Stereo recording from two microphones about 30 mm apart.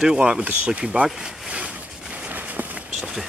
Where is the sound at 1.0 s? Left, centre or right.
Centre.